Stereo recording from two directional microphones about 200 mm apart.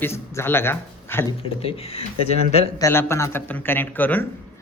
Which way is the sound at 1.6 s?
30° left (ahead or behind).